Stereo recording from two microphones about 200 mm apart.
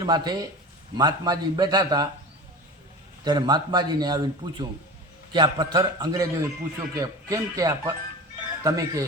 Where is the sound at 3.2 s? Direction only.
20° right (ahead or behind).